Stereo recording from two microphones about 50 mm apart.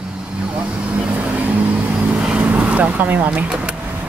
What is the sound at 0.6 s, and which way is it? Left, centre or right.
Vehicle, right.